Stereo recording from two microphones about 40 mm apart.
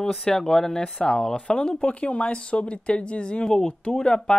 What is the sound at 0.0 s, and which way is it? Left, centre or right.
Speech, centre.